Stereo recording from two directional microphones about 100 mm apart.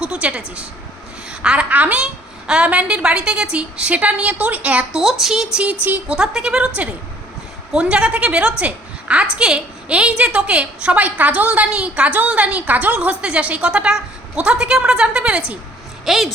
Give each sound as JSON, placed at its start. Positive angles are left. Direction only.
{"t": 0.0, "sound": "a woman's voice", "side_deg": -10}
{"t": 5.8, "sound": "a woman's voice", "side_deg": -20}
{"t": 6.1, "sound": "a woman's voice", "side_deg": -5}
{"t": 7.7, "sound": "a woman's voice", "side_deg": -10}